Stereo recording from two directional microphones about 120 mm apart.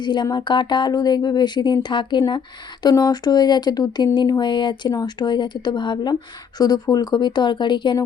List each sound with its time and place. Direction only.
0.0 s speech: 40° left (ahead or behind)